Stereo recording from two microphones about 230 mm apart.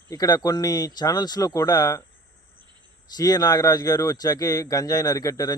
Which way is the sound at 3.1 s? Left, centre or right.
Centre.